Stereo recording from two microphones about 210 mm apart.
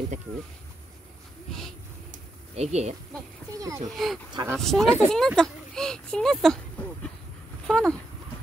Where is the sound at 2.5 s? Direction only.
30° right (ahead or behind).